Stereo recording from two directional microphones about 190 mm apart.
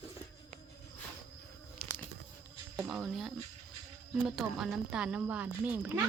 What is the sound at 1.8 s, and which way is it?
Insect, 50° left (ahead or behind).